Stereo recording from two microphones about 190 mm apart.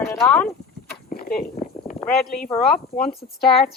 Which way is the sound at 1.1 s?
55° left (ahead or behind).